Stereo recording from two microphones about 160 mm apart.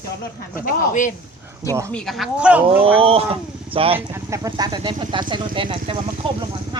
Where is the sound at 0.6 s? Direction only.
50° left (ahead or behind).